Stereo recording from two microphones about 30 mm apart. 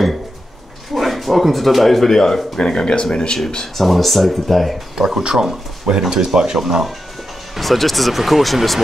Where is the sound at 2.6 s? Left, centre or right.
Left.